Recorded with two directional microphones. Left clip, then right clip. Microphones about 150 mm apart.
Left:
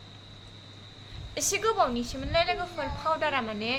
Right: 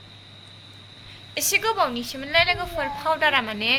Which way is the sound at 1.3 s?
Centre (ahead or behind).